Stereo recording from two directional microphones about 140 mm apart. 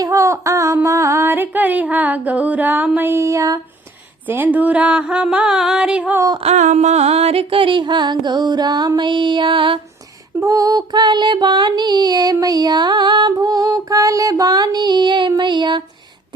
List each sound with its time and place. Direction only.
0.0 s a sound: 20° right (ahead or behind)
4.3 s music: 10° right (ahead or behind)
6.4 s music: 55° right (ahead or behind); by 9.8 s 35° right (ahead or behind)
10.4 s music: 25° right (ahead or behind)